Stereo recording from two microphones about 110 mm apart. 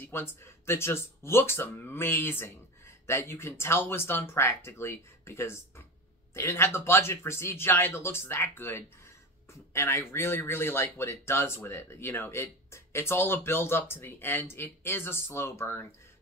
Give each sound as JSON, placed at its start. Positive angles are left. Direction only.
{"t": 0.0, "sound": "speech", "side_deg": 20}